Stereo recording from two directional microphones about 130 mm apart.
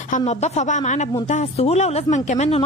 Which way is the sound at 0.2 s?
60° left (ahead or behind).